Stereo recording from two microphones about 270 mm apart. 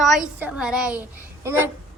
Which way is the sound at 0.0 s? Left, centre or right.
Centre.